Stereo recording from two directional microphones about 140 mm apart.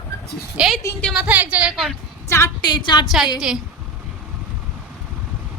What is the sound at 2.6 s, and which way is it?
Speech, 30° left (ahead or behind).